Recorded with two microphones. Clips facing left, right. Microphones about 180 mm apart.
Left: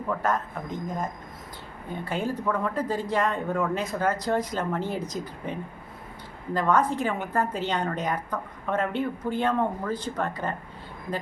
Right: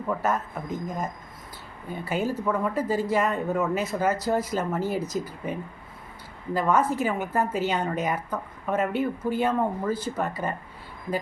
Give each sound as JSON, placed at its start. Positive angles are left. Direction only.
{"t": 0.1, "sound": "a man's voice", "side_deg": -5}
{"t": 1.9, "sound": "a woman's voice", "side_deg": -5}